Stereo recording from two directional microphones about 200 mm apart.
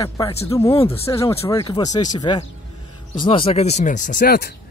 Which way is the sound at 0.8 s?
15° left (ahead or behind).